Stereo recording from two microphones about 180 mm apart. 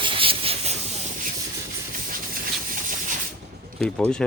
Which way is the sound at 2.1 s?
50° right (ahead or behind).